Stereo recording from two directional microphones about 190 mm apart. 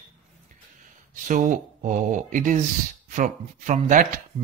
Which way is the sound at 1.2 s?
45° right (ahead or behind).